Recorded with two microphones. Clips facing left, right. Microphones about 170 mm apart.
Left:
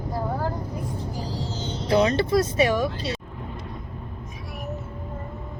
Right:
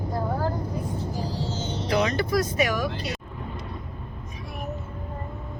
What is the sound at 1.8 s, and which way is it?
Speech, 30° left (ahead or behind).